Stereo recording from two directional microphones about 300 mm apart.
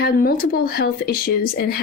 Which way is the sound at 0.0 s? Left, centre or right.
Left.